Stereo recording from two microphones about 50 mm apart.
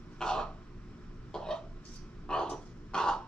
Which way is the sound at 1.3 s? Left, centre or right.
Centre.